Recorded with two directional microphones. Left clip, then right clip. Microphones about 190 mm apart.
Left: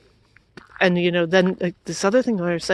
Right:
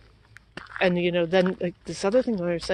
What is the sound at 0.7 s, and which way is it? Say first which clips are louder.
Speech: left 4 dB; 60° left (ahead or behind).